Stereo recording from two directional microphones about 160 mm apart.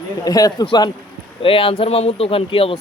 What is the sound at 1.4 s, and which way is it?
A man's voice, 35° left (ahead or behind).